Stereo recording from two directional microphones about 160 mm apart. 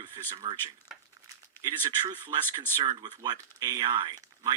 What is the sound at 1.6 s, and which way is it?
Speech, 25° right (ahead or behind).